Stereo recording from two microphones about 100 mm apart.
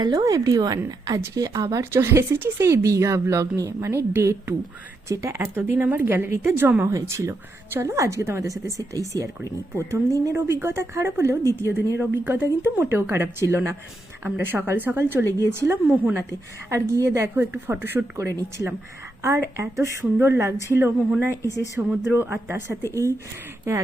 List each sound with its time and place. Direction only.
0.0 s a woman's voice: 40° right (ahead or behind); by 11.3 s 25° right (ahead or behind)
11.4 s a woman's voice: 30° left (ahead or behind)
11.9 s a woman's voice: 20° right (ahead or behind)
21.4 s speech: 35° left (ahead or behind)
22.1 s speech: 20° right (ahead or behind)